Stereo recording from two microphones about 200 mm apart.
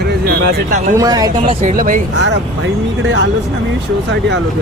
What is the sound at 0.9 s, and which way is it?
Speech, 20° right (ahead or behind).